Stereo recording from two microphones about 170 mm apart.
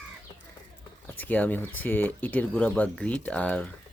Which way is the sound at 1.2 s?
10° left (ahead or behind).